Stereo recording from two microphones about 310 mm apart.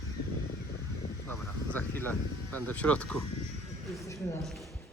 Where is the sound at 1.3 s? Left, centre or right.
Centre.